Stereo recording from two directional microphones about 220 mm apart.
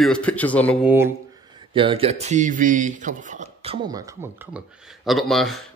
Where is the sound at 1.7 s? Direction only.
25° right (ahead or behind).